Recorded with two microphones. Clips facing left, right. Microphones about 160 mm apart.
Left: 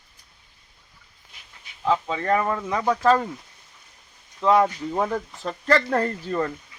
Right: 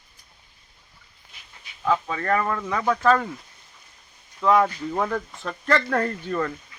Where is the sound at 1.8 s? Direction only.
20° left (ahead or behind).